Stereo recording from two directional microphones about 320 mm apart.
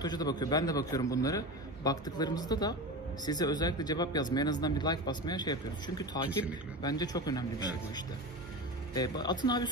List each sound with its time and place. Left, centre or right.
0.0 s speech: centre
8.9 s speech: centre